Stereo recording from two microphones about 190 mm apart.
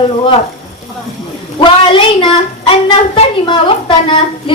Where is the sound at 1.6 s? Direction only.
25° left (ahead or behind).